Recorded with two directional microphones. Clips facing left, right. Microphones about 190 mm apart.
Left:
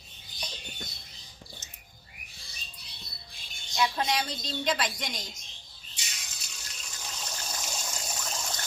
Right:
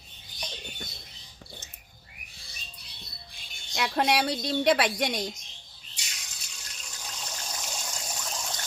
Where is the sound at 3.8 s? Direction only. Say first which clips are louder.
Right 3 dB; 65° right (ahead or behind).